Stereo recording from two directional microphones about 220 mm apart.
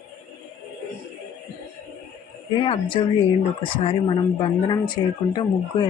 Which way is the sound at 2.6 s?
25° left (ahead or behind).